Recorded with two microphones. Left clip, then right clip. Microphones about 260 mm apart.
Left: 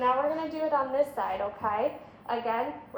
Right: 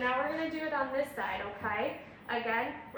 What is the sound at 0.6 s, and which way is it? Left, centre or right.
A woman's voice, centre.